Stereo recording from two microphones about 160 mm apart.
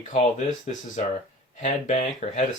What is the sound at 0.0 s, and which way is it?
Speech, 50° left (ahead or behind).